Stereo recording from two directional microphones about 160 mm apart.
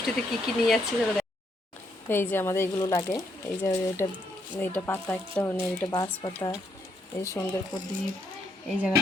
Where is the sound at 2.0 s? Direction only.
15° left (ahead or behind).